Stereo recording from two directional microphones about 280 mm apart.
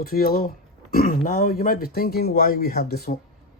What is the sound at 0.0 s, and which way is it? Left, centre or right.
Speech, left.